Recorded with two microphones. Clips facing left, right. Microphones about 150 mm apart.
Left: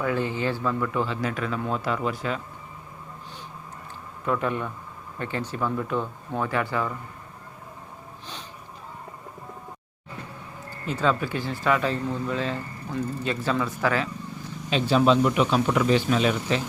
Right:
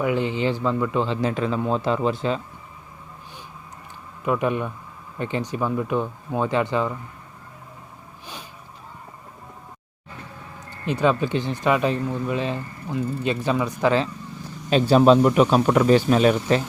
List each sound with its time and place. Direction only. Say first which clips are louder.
0.0 s speech: right 3 dB; 20° right (ahead or behind)
4.3 s speech: right 4 dB; 15° right (ahead or behind)
10.7 s speech: right 4 dB; 20° right (ahead or behind)
14.7 s speech: right 5 dB; 45° right (ahead or behind)